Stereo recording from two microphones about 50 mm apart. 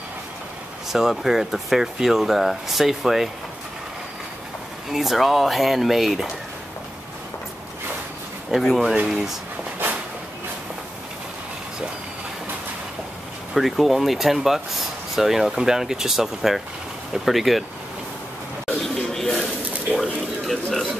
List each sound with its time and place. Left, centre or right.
0.9 s speech: centre
4.9 s speech: centre
8.5 s speech: centre
13.6 s speech: centre
18.8 s a sound: centre